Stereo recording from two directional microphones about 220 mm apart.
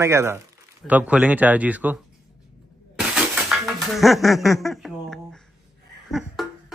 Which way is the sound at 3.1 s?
Centre (ahead or behind).